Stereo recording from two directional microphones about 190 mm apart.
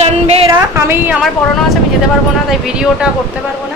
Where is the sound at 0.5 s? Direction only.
15° right (ahead or behind).